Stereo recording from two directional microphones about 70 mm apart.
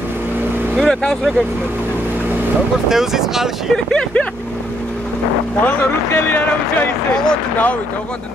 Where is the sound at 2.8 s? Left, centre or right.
Centre.